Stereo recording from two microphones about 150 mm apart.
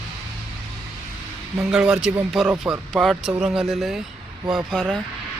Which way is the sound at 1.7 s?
5° right (ahead or behind).